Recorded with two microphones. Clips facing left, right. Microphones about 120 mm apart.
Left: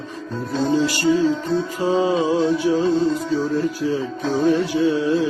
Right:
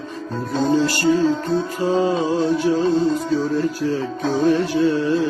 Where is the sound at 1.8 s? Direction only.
10° left (ahead or behind).